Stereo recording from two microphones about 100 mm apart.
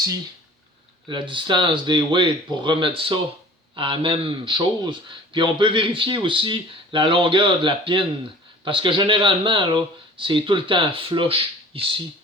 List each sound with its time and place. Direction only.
1.0 s speech: 55° right (ahead or behind)